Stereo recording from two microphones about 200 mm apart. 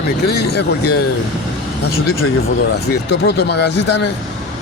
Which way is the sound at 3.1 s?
55° left (ahead or behind).